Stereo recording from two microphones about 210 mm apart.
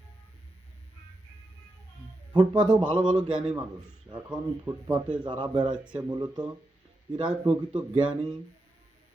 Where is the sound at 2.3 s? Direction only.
20° right (ahead or behind).